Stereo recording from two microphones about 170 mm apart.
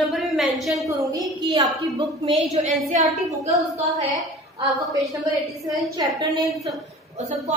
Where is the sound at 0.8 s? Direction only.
20° right (ahead or behind).